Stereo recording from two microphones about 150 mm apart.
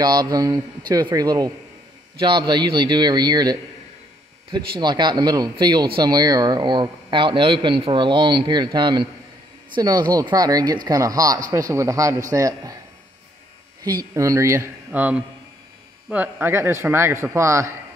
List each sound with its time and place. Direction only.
0.0 s speech: 25° right (ahead or behind)
4.7 s a man's voice: 30° right (ahead or behind)
13.8 s a man's voice: 25° right (ahead or behind)